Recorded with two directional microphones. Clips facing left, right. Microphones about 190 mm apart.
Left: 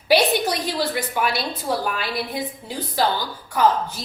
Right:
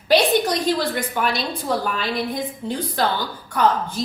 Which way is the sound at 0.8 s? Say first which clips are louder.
Even; 5° left (ahead or behind).